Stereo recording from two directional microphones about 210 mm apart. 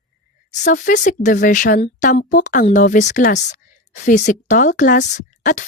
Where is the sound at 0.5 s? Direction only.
40° left (ahead or behind).